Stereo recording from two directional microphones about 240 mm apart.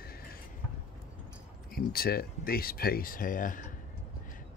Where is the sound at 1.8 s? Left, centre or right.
Left.